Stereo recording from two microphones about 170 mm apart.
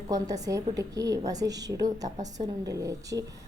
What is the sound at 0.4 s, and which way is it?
A woman's voice, 20° right (ahead or behind).